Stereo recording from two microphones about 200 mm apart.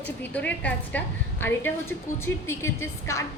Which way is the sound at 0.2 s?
5° left (ahead or behind).